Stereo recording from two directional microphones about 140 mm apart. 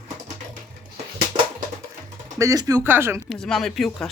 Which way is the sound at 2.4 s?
25° right (ahead or behind).